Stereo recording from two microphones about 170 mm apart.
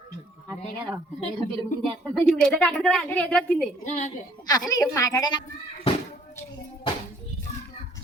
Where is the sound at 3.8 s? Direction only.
45° left (ahead or behind).